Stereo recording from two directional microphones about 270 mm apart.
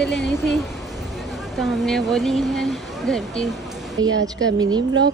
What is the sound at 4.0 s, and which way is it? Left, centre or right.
Speech, centre.